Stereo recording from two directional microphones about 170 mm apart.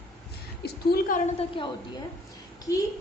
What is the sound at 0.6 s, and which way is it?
Speech, 65° left (ahead or behind).